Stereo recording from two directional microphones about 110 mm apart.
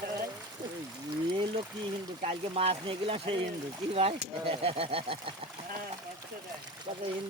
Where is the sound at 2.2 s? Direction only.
65° right (ahead or behind).